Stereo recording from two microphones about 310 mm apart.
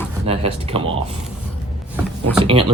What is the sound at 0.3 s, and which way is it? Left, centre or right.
Speech, centre.